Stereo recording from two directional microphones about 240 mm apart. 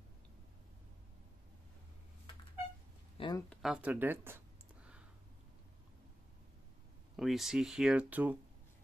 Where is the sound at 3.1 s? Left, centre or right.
Centre.